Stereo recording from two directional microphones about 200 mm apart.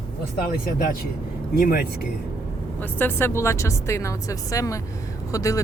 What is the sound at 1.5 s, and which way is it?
Speech, 50° left (ahead or behind).